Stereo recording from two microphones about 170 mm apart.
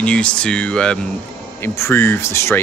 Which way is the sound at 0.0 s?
5° left (ahead or behind).